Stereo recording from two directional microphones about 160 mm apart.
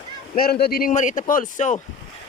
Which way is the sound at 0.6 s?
70° left (ahead or behind).